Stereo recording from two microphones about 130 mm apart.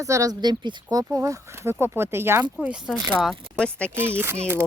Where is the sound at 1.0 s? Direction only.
20° right (ahead or behind).